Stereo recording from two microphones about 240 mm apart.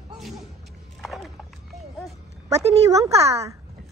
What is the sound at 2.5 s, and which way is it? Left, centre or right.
Speech, centre.